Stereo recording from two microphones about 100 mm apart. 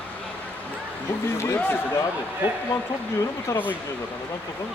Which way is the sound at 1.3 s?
25° left (ahead or behind).